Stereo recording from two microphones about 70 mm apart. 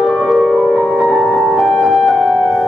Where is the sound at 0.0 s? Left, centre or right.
Centre.